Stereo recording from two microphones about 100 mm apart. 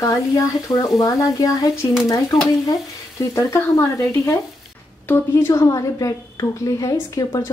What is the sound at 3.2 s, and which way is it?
A woman's voice, 30° left (ahead or behind).